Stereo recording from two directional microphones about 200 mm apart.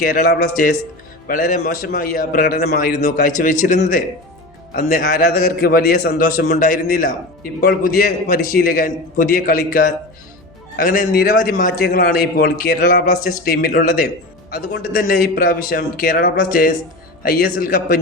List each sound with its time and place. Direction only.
0.0 s a man's voice: 45° left (ahead or behind)